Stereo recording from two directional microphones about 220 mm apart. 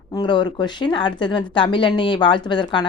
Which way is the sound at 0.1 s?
20° left (ahead or behind).